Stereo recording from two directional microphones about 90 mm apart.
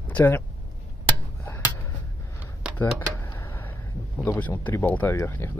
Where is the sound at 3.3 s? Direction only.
25° left (ahead or behind).